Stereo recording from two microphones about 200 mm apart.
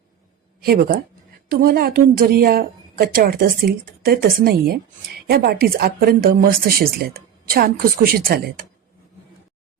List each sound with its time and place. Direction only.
0.6 s a woman's voice: 50° right (ahead or behind)